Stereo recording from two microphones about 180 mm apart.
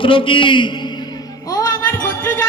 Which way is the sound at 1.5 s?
20° left (ahead or behind).